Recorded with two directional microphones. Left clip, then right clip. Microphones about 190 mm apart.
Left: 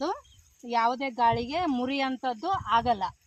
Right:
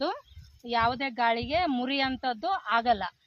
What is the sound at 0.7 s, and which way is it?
Speech, 20° right (ahead or behind).